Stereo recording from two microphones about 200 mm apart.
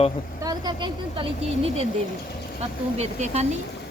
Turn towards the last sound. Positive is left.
turn(degrees=-35)  # may be behind; listen again after turning